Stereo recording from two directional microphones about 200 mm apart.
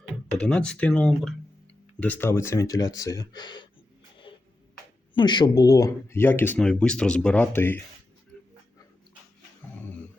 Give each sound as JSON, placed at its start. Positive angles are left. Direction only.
{"t": 0.3, "sound": "speech", "side_deg": 5}
{"t": 5.1, "sound": "speech", "side_deg": 20}